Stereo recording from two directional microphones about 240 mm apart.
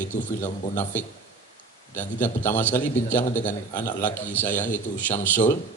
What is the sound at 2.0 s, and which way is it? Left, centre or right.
A man's voice, centre.